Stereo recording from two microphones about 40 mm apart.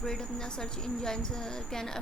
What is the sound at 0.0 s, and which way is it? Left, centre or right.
Speech, centre.